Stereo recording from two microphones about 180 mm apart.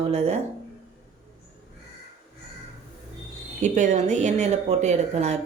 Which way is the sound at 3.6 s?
40° right (ahead or behind).